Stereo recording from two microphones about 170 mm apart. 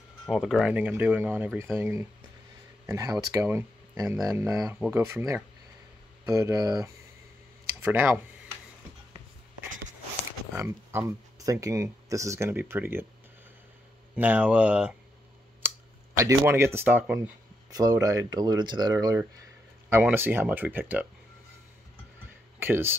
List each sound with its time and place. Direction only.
0.3 s speech: 5° right (ahead or behind); by 6.8 s 20° right (ahead or behind)
7.8 s a sound: 10° right (ahead or behind)
10.5 s speech: 15° right (ahead or behind)
14.1 s speech: 10° right (ahead or behind)
15.6 s a sound: 10° right (ahead or behind)
16.2 s speech: 15° right (ahead or behind)
17.6 s speech: 20° right (ahead or behind)
22.6 s speech: 15° right (ahead or behind)